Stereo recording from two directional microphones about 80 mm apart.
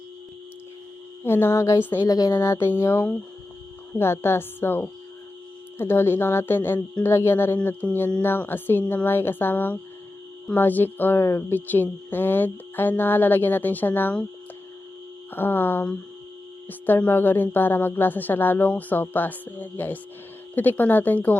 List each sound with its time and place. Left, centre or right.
1.2 s music: left
1.8 s speech: left
2.0 s a woman's voice: left
2.4 s music: left
2.8 s speech: left
15.3 s speech: left